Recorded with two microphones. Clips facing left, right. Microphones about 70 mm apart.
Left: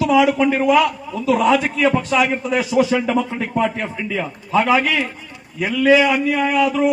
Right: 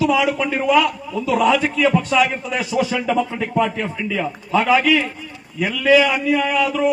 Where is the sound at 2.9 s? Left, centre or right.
Centre.